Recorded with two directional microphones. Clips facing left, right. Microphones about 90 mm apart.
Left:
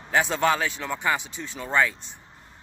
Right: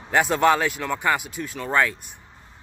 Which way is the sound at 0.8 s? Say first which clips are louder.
Right 3 dB; 5° left (ahead or behind).